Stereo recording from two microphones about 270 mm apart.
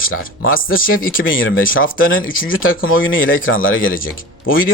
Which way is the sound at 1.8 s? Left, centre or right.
Left.